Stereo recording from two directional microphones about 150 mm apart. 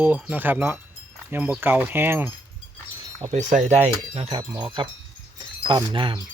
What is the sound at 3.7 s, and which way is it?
Speech, 45° right (ahead or behind).